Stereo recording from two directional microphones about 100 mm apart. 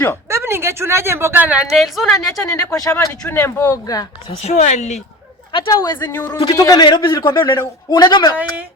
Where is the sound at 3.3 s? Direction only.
25° left (ahead or behind).